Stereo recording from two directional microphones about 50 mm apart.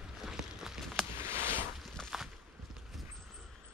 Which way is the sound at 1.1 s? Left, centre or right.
Right.